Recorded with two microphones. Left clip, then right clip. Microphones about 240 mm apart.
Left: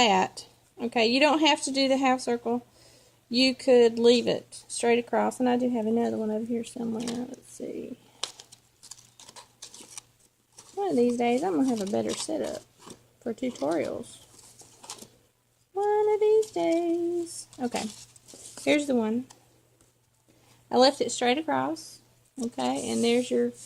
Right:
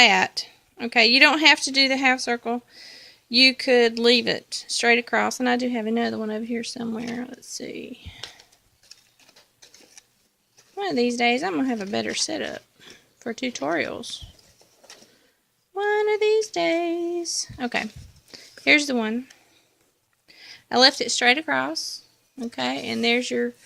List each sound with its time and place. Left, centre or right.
0.0 s speech: right
10.8 s speech: right
13.6 s speech: right
15.7 s speech: right
20.7 s speech: right